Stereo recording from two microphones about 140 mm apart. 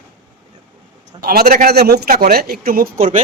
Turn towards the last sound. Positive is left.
turn(degrees=-85)